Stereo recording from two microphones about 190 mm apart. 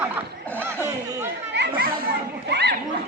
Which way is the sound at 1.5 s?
65° right (ahead or behind).